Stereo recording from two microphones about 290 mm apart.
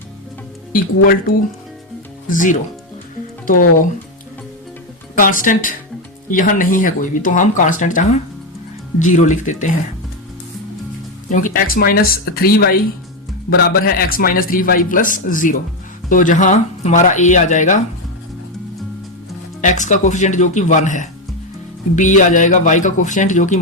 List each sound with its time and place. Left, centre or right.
0.7 s a man's voice: left
2.3 s a man's voice: left
5.1 s a man's voice: left
11.3 s a man's voice: left
19.6 s a man's voice: left
22.2 s a man's voice: left